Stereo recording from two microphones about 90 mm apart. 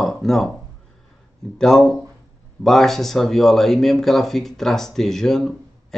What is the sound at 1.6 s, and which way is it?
Speech, 5° left (ahead or behind).